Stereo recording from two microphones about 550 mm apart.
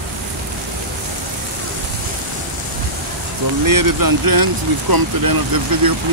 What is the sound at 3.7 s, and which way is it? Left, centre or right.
Speech, right.